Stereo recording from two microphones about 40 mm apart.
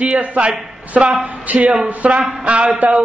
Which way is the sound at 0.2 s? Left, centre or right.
Right.